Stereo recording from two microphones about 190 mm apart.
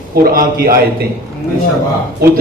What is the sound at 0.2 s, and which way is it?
Speech, 55° right (ahead or behind).